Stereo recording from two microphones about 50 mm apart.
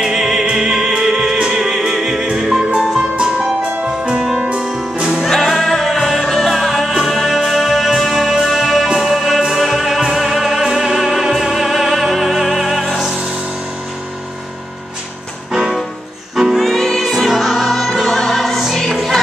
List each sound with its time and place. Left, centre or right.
0.0 s music: centre
3.8 s music: right
4.2 s music: centre
5.3 s music: centre
16.5 s music: centre